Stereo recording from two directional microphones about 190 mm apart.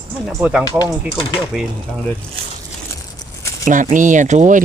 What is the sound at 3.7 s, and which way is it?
Speech, 40° right (ahead or behind).